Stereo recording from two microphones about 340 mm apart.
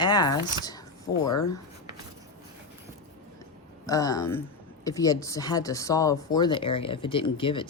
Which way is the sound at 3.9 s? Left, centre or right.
Centre.